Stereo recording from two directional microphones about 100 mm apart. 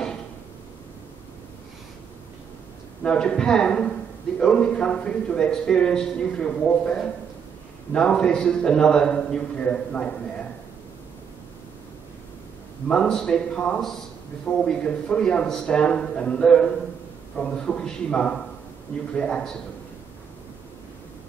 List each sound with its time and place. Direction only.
3.0 s a man's voice: 10° left (ahead or behind)
12.8 s a man's voice: 5° left (ahead or behind)